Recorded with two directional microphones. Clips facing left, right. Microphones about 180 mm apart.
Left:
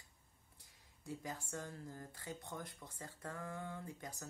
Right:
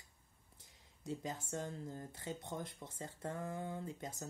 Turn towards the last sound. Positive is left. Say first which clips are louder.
# right 4 dB
turn(degrees=-25)  # may be behind; listen again after turning